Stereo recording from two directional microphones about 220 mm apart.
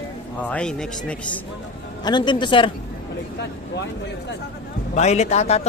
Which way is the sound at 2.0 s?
20° left (ahead or behind).